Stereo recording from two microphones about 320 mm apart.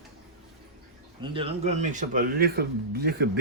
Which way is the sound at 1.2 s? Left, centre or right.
Centre.